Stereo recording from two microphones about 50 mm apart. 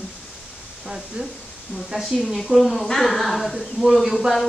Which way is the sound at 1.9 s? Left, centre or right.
Centre.